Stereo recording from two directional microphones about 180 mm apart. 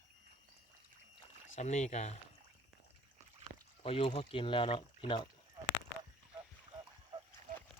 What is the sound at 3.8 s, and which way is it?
Speech, 30° left (ahead or behind).